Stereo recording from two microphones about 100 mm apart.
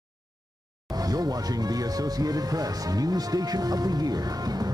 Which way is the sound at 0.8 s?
40° right (ahead or behind).